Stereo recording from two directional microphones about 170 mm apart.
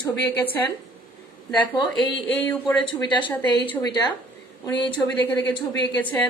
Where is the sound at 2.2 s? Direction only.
10° left (ahead or behind).